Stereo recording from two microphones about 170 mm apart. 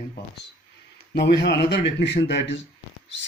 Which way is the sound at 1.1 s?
80° left.